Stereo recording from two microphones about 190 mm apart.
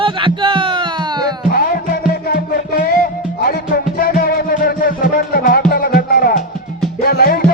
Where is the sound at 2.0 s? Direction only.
50° left (ahead or behind).